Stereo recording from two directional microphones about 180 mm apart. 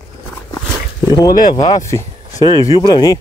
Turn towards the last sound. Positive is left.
turn(degrees=20)  # may be behind; listen again after turning